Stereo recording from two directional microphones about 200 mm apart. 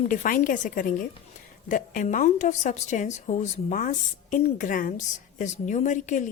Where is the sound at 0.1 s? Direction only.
40° left (ahead or behind).